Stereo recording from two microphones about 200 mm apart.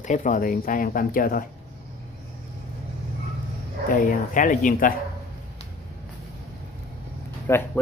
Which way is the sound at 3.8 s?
40° left (ahead or behind).